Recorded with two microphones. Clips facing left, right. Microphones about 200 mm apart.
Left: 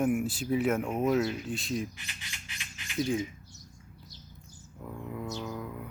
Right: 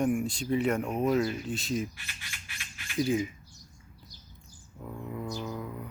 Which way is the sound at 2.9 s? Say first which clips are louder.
Right 2 dB; 5° right (ahead or behind).